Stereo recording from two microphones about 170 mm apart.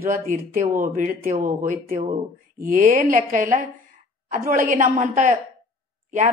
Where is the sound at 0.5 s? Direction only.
50° right (ahead or behind).